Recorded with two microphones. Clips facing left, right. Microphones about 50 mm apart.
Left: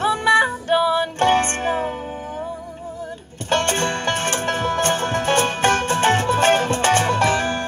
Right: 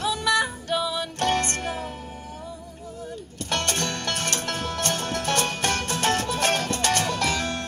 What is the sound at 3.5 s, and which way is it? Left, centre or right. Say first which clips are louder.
Music: left 7 dB; left.